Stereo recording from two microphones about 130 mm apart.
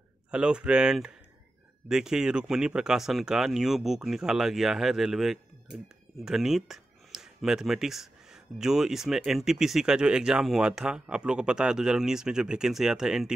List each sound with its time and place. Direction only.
0.3 s speech: 5° right (ahead or behind)